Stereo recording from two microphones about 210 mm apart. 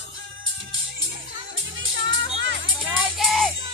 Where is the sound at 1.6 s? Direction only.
65° right (ahead or behind).